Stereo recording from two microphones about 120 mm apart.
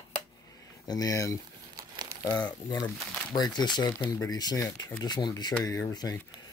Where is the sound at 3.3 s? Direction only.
35° left (ahead or behind).